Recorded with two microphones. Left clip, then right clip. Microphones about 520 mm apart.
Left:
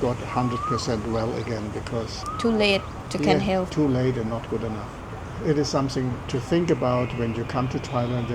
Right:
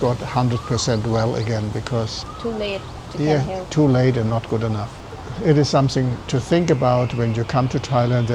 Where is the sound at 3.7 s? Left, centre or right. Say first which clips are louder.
Right 6 dB; right.